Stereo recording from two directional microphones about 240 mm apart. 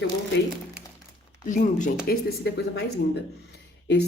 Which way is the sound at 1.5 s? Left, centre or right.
Left.